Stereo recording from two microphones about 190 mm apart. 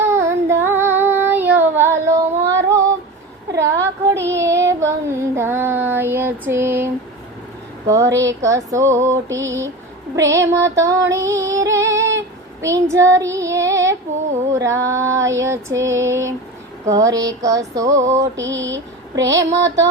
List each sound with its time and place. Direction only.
0.0 s child singing: 15° right (ahead or behind)
7.9 s music: 15° right (ahead or behind)
12.6 s child singing: 15° right (ahead or behind)
14.5 s music: 15° right (ahead or behind)
18.3 s mantra: 75° right (ahead or behind)
19.3 s music: 15° right (ahead or behind)